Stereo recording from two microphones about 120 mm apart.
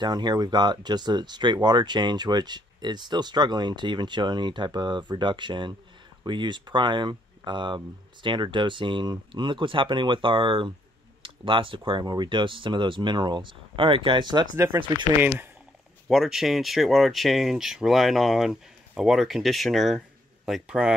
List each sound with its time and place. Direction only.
0.0 s speech: 35° right (ahead or behind)
16.1 s speech: 5° right (ahead or behind)